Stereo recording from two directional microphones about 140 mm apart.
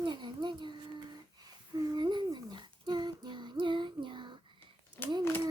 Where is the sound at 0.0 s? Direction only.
35° right (ahead or behind).